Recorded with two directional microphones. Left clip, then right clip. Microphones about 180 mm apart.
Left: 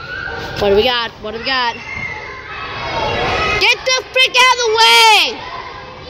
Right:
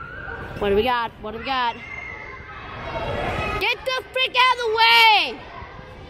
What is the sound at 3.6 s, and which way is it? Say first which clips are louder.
Speech: left 9 dB; 10° right (ahead or behind).